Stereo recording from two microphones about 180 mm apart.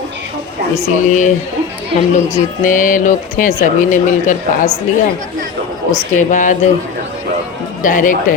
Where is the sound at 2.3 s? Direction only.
45° left (ahead or behind).